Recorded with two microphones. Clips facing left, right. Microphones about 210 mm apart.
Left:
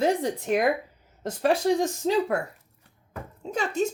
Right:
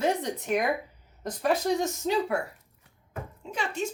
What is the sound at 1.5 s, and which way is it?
Speech, 30° left (ahead or behind).